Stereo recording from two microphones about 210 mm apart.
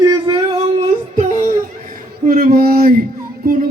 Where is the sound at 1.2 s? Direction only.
40° right (ahead or behind).